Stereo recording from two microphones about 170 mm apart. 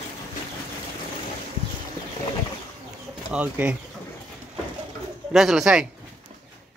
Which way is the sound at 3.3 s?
10° right (ahead or behind).